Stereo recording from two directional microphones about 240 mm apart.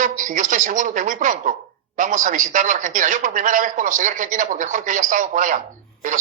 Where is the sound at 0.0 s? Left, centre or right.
Right.